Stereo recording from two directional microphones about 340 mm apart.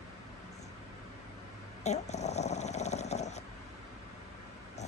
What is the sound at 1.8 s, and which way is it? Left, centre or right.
Snoring, centre.